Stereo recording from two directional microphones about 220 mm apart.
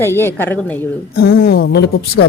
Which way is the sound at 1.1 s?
45° left (ahead or behind).